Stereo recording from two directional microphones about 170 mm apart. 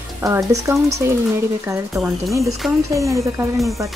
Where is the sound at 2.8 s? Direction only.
20° right (ahead or behind).